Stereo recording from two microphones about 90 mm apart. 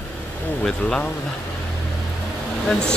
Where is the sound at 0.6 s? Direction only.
15° left (ahead or behind).